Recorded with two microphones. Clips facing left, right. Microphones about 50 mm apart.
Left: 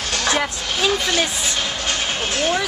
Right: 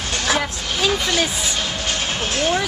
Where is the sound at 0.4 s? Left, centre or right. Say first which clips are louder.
Left 1 dB; centre.